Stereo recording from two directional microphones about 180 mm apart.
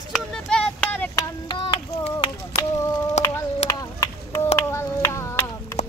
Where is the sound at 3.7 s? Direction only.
20° left (ahead or behind).